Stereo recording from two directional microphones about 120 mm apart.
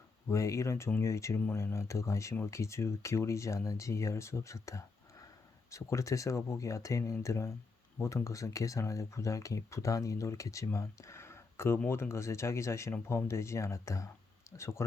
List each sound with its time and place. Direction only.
0.3 s speech: 25° left (ahead or behind)